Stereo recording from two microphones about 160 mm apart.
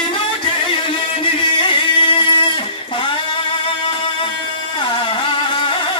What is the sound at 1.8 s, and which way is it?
Music, 30° left (ahead or behind).